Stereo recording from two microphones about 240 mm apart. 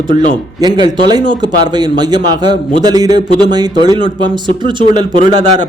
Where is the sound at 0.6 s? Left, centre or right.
Centre.